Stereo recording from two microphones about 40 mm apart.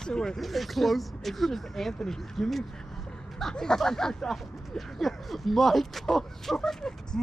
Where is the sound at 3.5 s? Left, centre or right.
Centre.